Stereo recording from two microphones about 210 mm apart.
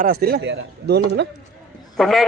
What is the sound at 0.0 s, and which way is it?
A man's voice, 50° right (ahead or behind).